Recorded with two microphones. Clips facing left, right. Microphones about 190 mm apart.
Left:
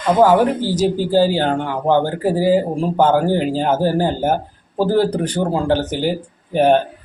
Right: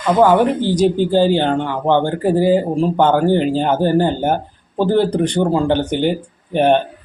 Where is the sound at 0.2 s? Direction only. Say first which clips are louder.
Right 1 dB; 10° left (ahead or behind).